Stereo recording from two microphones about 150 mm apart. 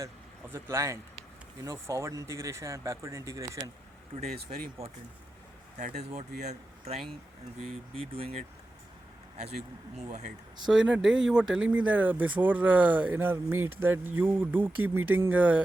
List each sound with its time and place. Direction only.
0.5 s speech: 20° right (ahead or behind)
4.5 s speech: 50° right (ahead or behind)
5.7 s speech: 70° right (ahead or behind)
6.0 s speech: 45° right (ahead or behind)
10.7 s speech: 5° right (ahead or behind)